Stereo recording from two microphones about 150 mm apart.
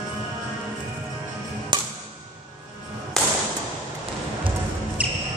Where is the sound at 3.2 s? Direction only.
5° left (ahead or behind).